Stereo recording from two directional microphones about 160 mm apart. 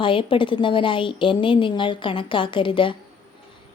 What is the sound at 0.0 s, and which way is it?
A woman's voice, 30° left (ahead or behind).